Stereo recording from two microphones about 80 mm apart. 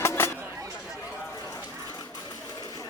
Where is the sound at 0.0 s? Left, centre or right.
Left.